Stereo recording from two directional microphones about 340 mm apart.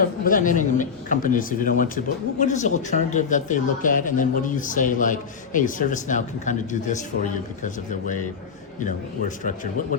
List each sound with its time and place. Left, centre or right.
0.0 s speech: left